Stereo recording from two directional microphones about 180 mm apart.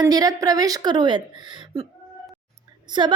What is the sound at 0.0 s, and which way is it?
A woman's voice, 20° right (ahead or behind).